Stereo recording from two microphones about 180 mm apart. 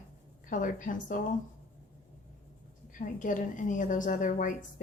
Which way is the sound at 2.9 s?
45° left (ahead or behind).